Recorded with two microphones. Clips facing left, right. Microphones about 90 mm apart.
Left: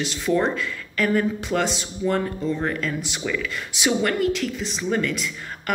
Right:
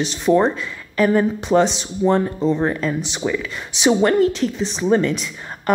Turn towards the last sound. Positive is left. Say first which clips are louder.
# right 6 dB
turn(degrees=-25)  # may be behind; listen again after turning